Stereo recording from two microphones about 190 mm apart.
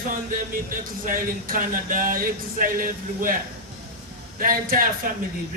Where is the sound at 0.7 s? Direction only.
45° right (ahead or behind).